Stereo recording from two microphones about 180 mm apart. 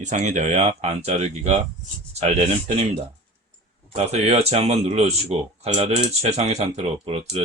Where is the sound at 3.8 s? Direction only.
35° right (ahead or behind).